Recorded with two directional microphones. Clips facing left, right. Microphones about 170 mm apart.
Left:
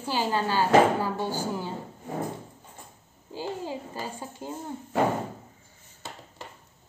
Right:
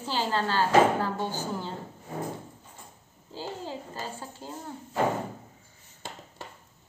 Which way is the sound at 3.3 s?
15° left (ahead or behind).